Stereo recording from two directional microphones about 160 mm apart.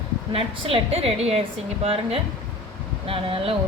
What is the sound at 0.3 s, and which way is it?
Speech, 35° right (ahead or behind).